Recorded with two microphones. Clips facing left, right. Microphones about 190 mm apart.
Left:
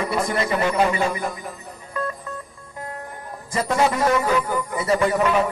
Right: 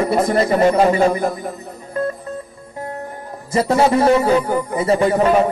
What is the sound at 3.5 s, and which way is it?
A man's voice, 30° right (ahead or behind).